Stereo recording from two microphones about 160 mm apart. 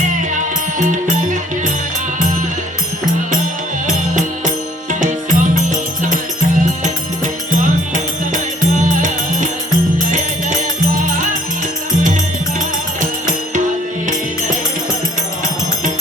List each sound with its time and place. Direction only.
4.9 s music: 55° right (ahead or behind)
7.6 s music: 55° right (ahead or behind)
10.9 s music: 55° right (ahead or behind)